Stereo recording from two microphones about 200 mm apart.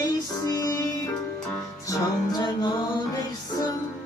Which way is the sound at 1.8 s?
20° left (ahead or behind).